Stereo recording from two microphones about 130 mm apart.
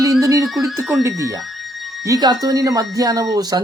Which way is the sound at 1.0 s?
25° right (ahead or behind).